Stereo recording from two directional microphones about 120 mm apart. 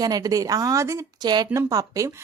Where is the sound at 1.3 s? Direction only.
35° right (ahead or behind).